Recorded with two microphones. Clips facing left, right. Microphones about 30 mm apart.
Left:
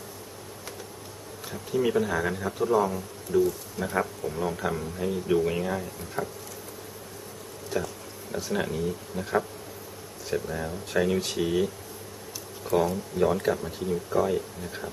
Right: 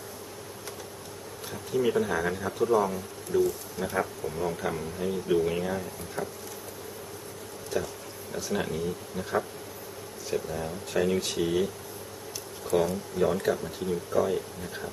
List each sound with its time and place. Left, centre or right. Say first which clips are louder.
1.5 s speech: left 1 dB; centre
7.7 s a sound: left 1 dB; centre
8.5 s speech: left 1 dB; centre
10.5 s speech: left 2 dB; centre
11.1 s speech: left 1 dB; centre
12.7 s speech: left 1 dB; centre